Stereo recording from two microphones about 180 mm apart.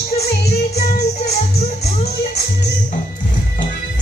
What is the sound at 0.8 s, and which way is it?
Music, 60° left (ahead or behind).